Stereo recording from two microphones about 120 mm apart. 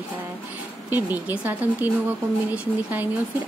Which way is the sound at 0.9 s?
15° right (ahead or behind).